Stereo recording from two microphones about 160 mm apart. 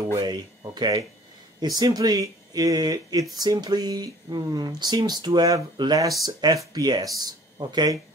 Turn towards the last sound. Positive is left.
turn(degrees=-25)  # may be behind; listen again after turning